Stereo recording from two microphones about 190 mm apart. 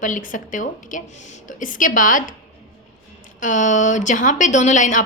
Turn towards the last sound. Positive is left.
turn(degrees=40)  # may be behind; listen again after turning